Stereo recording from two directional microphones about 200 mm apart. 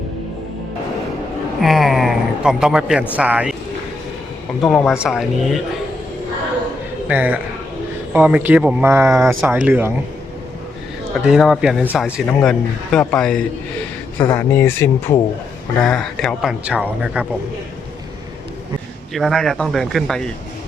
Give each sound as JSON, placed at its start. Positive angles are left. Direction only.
{"t": 1.6, "sound": "speech", "side_deg": 0}
{"t": 4.6, "sound": "speech", "side_deg": 0}
{"t": 7.1, "sound": "speech", "side_deg": -10}
{"t": 11.3, "sound": "speech", "side_deg": 0}
{"t": 19.1, "sound": "speech", "side_deg": 0}